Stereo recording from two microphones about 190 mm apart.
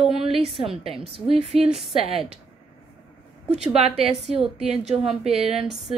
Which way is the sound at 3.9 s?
30° right (ahead or behind).